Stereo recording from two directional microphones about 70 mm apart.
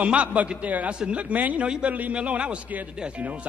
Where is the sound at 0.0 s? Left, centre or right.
Centre.